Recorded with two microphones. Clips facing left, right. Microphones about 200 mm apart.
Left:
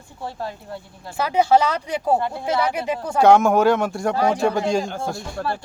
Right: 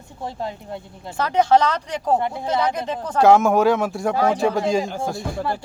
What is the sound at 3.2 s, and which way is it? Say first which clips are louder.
Speech: even; centre (ahead or behind).